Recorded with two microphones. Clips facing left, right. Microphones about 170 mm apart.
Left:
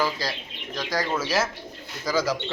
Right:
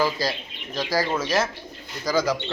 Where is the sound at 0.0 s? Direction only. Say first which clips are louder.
Right 3 dB; 10° right (ahead or behind).